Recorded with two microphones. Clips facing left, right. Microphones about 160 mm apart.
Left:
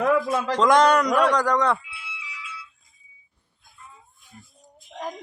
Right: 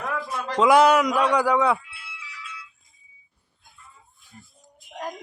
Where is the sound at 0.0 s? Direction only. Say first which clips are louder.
Left 9 dB; 90° left.